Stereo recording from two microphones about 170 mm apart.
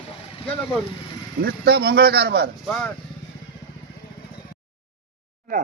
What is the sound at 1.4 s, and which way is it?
Speech, 65° right (ahead or behind).